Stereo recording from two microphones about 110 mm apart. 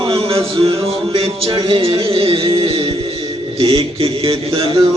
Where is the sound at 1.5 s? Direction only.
55° right (ahead or behind).